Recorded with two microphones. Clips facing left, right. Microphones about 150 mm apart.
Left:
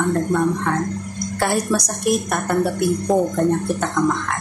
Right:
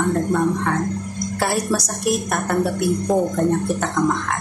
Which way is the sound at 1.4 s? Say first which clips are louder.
Left 1 dB; 5° right (ahead or behind).